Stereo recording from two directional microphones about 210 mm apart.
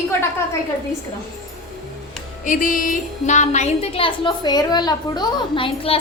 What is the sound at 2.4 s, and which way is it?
A woman's voice, 40° left (ahead or behind).